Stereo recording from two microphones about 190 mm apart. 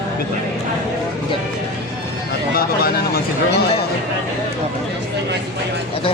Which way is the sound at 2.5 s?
55° left (ahead or behind).